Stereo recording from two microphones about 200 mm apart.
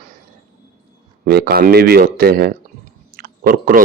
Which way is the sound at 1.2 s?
50° right (ahead or behind).